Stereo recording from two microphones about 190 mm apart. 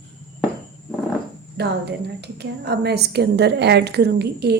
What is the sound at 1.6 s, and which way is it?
A woman's voice, 60° right (ahead or behind).